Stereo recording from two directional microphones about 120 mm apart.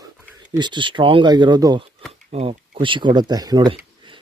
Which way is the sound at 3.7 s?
45° right (ahead or behind).